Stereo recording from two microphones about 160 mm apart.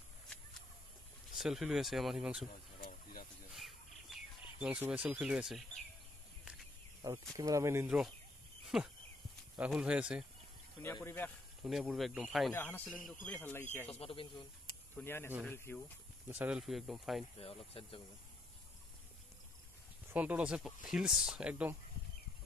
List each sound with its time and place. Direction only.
1.3 s speech: 5° right (ahead or behind)
2.8 s a sound: 65° left (ahead or behind)
3.5 s bird: centre (ahead or behind)
7.0 s speech: 20° right (ahead or behind)
8.6 s a sound: centre (ahead or behind)
9.6 s speech: 5° right (ahead or behind)
11.0 s speech: 15° left (ahead or behind)
11.6 s speech: 5° right (ahead or behind)
12.5 s speech: 10° left (ahead or behind)
13.9 s speech: 35° left (ahead or behind)
15.0 s speech: 15° left (ahead or behind)
16.3 s speech: 10° right (ahead or behind)
17.4 s speech: 35° left (ahead or behind)
20.1 s speech: 10° right (ahead or behind)